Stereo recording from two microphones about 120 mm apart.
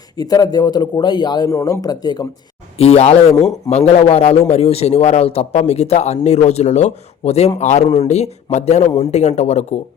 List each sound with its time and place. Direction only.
0.2 s a man's voice: 30° left (ahead or behind)
2.7 s a man's voice: 60° left (ahead or behind)
7.6 s speech: 75° left (ahead or behind)